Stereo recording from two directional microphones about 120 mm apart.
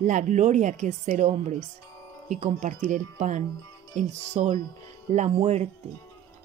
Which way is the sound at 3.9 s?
75° right (ahead or behind).